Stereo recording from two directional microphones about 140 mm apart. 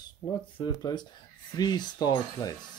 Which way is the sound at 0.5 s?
30° left (ahead or behind).